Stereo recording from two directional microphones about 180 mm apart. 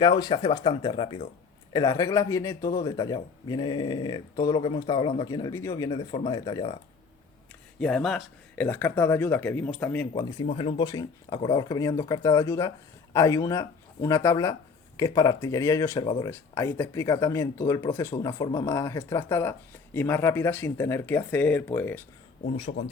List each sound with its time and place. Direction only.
0.0 s speech: 25° left (ahead or behind)
7.8 s speech: 5° left (ahead or behind)
8.6 s speech: 10° left (ahead or behind)
10.4 s speech: 35° left (ahead or behind); by 22.0 s 10° left (ahead or behind)
22.4 s speech: 35° left (ahead or behind)